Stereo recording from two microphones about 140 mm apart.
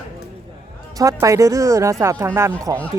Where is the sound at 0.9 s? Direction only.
25° right (ahead or behind).